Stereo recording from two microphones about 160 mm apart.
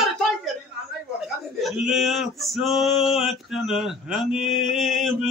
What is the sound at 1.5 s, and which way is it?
Speech, centre (ahead or behind).